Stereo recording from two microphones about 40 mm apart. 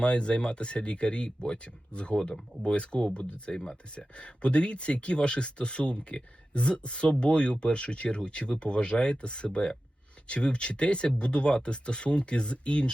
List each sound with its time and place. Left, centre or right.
0.0 s speech: left